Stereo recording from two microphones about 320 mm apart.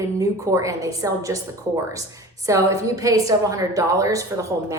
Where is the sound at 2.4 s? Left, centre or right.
Centre.